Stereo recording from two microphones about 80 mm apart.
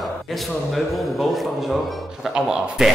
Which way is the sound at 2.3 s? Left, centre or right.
Centre.